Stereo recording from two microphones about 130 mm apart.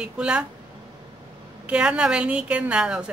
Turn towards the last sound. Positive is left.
turn(degrees=-10)  # may be behind; listen again after turning